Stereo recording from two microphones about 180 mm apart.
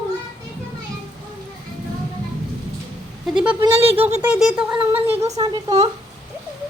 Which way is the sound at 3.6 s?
30° right (ahead or behind).